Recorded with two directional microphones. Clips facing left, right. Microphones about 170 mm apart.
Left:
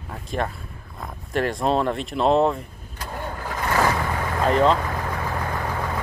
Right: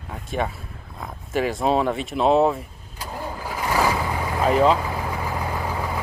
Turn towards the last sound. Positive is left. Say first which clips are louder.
# even
turn(degrees=-10)  # may be behind; listen again after turning